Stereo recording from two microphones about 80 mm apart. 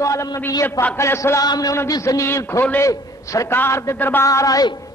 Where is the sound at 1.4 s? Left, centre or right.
Left.